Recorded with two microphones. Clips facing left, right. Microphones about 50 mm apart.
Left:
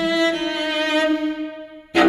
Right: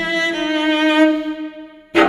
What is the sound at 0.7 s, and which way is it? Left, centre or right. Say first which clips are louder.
Music: right 7 dB; centre.